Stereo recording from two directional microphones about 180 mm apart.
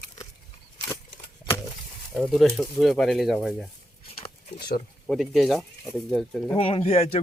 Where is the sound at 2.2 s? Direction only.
Centre (ahead or behind).